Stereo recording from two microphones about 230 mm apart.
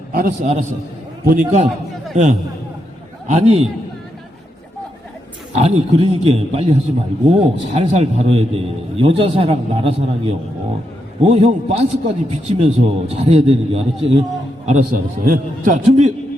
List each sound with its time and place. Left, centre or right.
0.1 s a man's voice: right
3.2 s a man's voice: right
5.5 s a man's voice: right
14.7 s a man's voice: right